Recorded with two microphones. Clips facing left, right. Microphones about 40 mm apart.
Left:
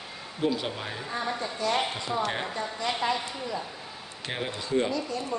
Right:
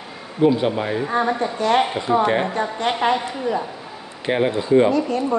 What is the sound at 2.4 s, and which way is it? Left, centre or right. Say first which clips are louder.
Speech: right 9 dB; right.